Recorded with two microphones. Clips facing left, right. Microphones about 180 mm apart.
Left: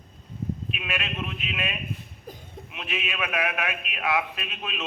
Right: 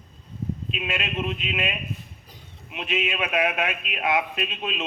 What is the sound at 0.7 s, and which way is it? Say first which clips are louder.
Speech: right 3 dB; 20° right (ahead or behind).